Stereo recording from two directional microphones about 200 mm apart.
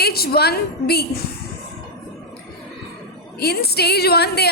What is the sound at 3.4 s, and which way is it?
A woman's voice, 55° left (ahead or behind).